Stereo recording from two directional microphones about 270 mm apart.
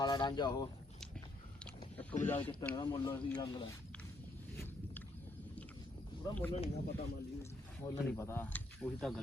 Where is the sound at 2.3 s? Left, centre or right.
Centre.